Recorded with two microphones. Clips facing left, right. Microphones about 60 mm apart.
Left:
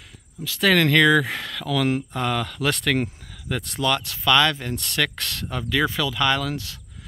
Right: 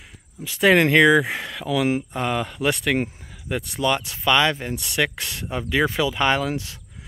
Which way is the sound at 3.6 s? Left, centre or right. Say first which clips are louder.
Right 1 dB; centre.